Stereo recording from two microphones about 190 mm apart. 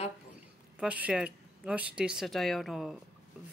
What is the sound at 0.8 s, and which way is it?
Speech, 5° right (ahead or behind).